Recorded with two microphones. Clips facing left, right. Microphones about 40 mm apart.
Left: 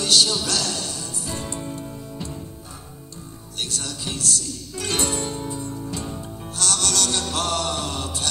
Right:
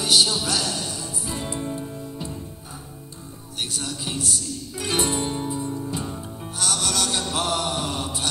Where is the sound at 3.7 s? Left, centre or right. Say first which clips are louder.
Right 1 dB; centre.